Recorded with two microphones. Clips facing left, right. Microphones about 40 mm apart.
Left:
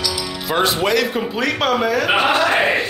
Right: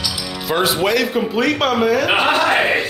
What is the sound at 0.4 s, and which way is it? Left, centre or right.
Speech, centre.